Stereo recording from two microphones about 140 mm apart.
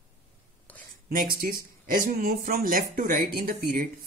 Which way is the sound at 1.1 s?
85° right.